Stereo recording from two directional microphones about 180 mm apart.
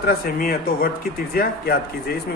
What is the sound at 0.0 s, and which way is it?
Speech, 55° left (ahead or behind).